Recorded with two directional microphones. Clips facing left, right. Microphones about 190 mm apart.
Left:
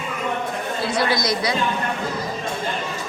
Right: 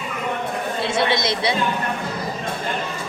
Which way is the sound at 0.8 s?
25° right (ahead or behind).